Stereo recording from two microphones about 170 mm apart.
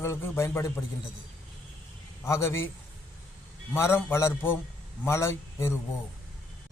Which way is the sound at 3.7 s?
15° left (ahead or behind).